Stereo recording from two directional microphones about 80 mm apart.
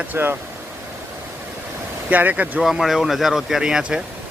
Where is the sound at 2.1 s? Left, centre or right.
Right.